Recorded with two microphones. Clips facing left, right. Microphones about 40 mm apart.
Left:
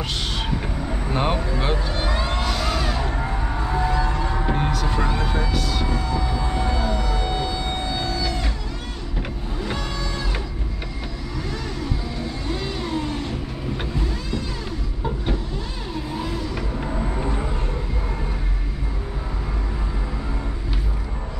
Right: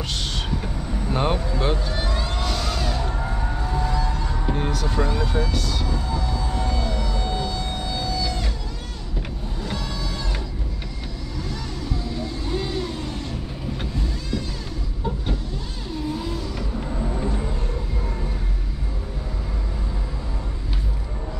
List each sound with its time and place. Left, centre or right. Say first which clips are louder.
0.6 s vehicle: left 2 dB; left
1.1 s speech: even; centre
2.0 s music: left 3 dB; left
2.4 s music: left 2 dB; centre; by 4.6 s left
4.6 s speech: left 1 dB; centre
6.1 s a sound: left 2 dB; left
8.2 s music: left 1 dB; centre
9.7 s vehicle: left 1 dB; centre
12.5 s vehicle: right 2 dB; centre
12.8 s vehicle: left 4 dB; centre
16.2 s vehicle: left 2 dB; left